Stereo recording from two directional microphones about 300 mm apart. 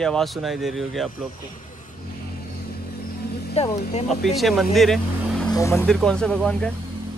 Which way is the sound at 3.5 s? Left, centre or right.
Left.